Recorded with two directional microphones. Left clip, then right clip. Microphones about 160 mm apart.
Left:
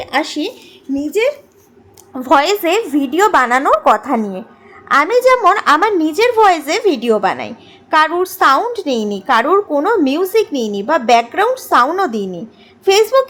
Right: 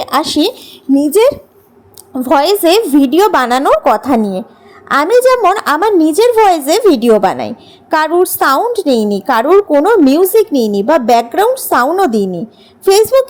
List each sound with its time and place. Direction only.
0.0 s speech: 45° right (ahead or behind)
2.1 s a woman's voice: 30° right (ahead or behind)
2.4 s a woman's voice: 40° right (ahead or behind)